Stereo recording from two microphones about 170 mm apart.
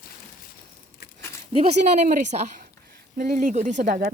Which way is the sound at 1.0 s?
70° left (ahead or behind).